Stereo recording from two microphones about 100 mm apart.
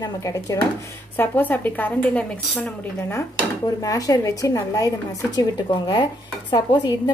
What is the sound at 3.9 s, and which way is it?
Speech, 35° left (ahead or behind).